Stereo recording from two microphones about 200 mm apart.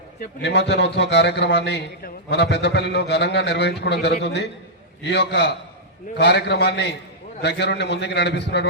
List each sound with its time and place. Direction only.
0.4 s a man's voice: 60° left (ahead or behind)